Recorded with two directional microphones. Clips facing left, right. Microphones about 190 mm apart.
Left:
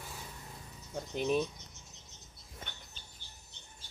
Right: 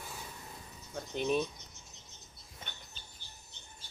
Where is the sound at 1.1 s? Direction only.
Centre (ahead or behind).